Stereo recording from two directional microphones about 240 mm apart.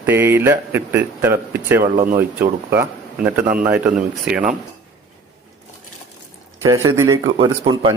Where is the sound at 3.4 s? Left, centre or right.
Right.